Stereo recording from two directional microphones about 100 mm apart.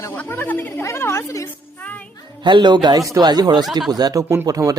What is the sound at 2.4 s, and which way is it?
A man's voice, 50° right (ahead or behind).